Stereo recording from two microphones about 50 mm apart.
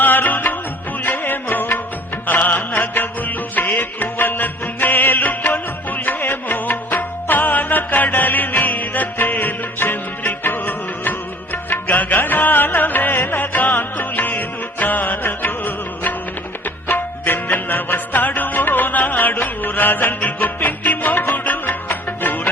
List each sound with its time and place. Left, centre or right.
0.0 s music: left